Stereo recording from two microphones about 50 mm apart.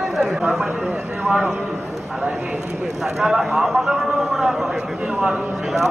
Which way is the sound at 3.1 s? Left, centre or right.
Centre.